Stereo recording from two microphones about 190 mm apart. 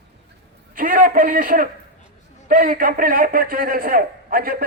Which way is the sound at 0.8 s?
45° right (ahead or behind).